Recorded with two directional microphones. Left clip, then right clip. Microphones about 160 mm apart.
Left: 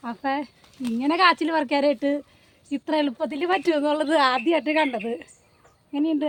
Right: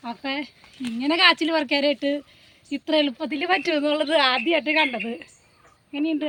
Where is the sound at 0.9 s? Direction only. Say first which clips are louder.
Right 1 dB; 65° left (ahead or behind).